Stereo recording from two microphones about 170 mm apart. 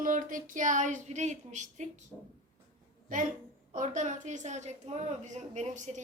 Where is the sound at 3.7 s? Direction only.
45° right (ahead or behind).